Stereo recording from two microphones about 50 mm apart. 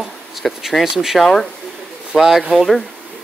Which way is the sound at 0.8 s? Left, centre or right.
Centre.